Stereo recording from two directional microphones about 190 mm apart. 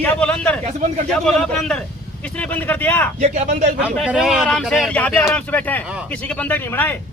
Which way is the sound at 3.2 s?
35° right (ahead or behind).